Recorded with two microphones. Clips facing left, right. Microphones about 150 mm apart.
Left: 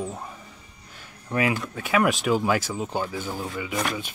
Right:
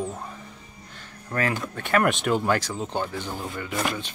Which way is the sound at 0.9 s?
10° left (ahead or behind).